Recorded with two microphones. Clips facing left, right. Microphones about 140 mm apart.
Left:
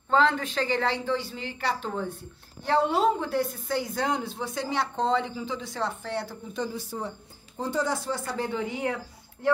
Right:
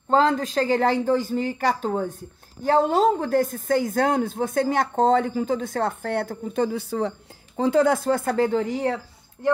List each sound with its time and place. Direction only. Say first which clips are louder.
0.1 s speech: right 4 dB; 40° right (ahead or behind); by 6.8 s 60° right (ahead or behind)
7.0 s a woman's voice: right 9 dB; 90° right; by 8.9 s 40° right (ahead or behind)